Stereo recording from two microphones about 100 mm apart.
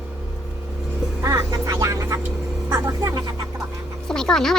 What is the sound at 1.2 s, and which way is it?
Vehicle, 35° right (ahead or behind).